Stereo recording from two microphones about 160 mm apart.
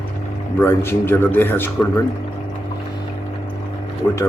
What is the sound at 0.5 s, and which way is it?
A man's voice, 15° left (ahead or behind).